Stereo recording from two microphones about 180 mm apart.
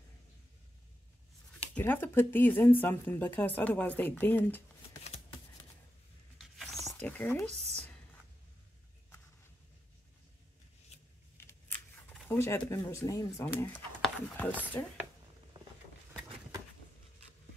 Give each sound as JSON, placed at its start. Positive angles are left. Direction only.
{"t": 1.8, "sound": "speech", "side_deg": 10}
{"t": 5.0, "sound": "shuffling cards", "side_deg": 35}
{"t": 6.3, "sound": "a sound", "side_deg": 0}
{"t": 12.1, "sound": "speech", "side_deg": 10}
{"t": 14.0, "sound": "a sound", "side_deg": 5}
{"t": 14.8, "sound": "speech", "side_deg": 15}